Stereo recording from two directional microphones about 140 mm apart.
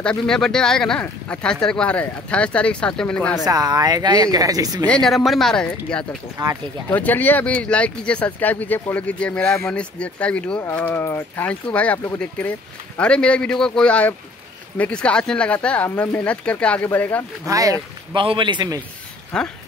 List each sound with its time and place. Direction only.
0.0 s speech: 5° left (ahead or behind)
3.4 s speech: 25° right (ahead or behind)
4.8 s speech: 5° left (ahead or behind)
6.3 s speech: 20° right (ahead or behind)
6.9 s speech: 10° left (ahead or behind)
17.5 s speech: 25° right (ahead or behind)
18.1 s a man's voice: 40° right (ahead or behind)
19.3 s speech: 5° left (ahead or behind)